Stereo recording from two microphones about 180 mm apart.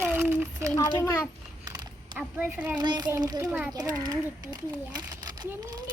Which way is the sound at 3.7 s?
20° right (ahead or behind).